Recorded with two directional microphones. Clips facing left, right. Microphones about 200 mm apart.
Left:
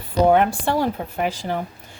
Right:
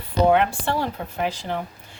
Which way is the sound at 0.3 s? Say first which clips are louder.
Left 2 dB; 45° left (ahead or behind).